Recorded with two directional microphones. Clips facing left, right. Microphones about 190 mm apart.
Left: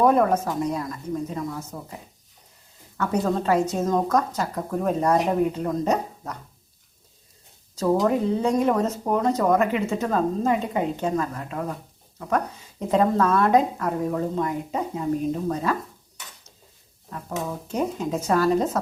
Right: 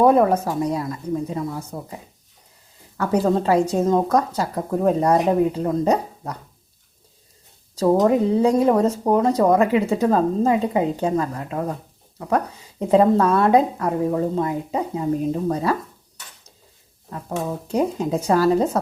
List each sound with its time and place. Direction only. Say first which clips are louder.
0.0 s speech: right 3 dB; 30° right (ahead or behind)
3.0 s speech: right 4 dB; 30° right (ahead or behind)
7.8 s speech: right 4 dB; 30° right (ahead or behind)
12.9 s speech: right 4 dB; 30° right (ahead or behind)
17.1 s speech: right 4 dB; 35° right (ahead or behind)